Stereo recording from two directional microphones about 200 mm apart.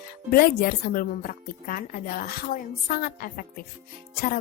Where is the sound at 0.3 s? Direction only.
45° left (ahead or behind).